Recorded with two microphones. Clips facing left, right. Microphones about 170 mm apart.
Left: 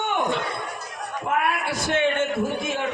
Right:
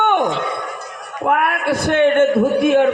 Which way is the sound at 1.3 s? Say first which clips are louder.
Right 7 dB; 60° right (ahead or behind).